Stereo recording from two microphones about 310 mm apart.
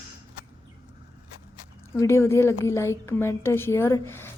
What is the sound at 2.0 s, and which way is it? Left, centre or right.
A woman's voice, centre.